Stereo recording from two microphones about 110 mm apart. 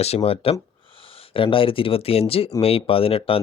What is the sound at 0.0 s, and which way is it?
Speech, 75° left (ahead or behind).